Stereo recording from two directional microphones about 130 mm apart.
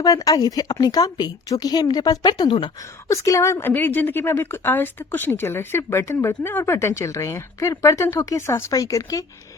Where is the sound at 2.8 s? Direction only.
25° left (ahead or behind).